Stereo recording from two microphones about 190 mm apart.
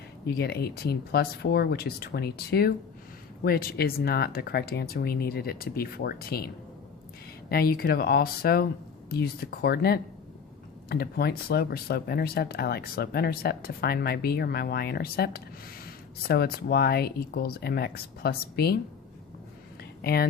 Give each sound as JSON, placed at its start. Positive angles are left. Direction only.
{"t": 0.3, "sound": "speech", "side_deg": 55}
{"t": 7.5, "sound": "speech", "side_deg": 55}
{"t": 20.0, "sound": "speech", "side_deg": 55}